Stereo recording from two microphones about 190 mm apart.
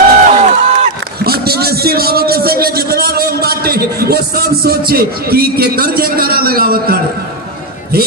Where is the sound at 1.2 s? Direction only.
55° right (ahead or behind).